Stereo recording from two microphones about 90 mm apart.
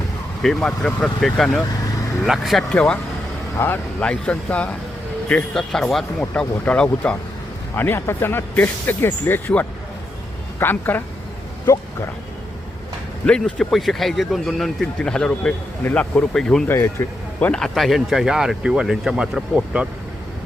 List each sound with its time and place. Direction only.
0.4 s speech: 5° left (ahead or behind)
2.7 s speech: 10° left (ahead or behind)
3.6 s speech: 30° left (ahead or behind)
4.0 s speech: 10° left (ahead or behind)
7.8 s speech: 25° left (ahead or behind)
10.6 s speech: 25° left (ahead or behind)
13.2 s speech: 10° left (ahead or behind)
15.8 s speech: 20° left (ahead or behind)
16.6 s speech: 25° left (ahead or behind)
17.4 s speech: 10° left (ahead or behind); by 19.9 s 15° right (ahead or behind)